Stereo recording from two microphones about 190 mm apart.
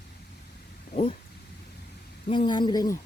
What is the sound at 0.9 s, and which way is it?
Speech, 30° left (ahead or behind).